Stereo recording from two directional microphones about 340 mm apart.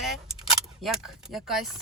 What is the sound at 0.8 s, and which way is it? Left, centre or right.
Speech, centre.